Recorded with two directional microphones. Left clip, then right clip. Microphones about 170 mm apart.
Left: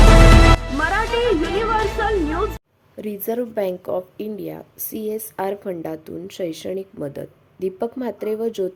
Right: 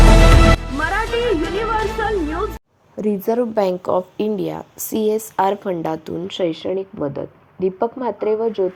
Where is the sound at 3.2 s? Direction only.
5° left (ahead or behind).